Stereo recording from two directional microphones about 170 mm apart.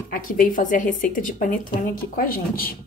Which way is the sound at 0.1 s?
50° left (ahead or behind).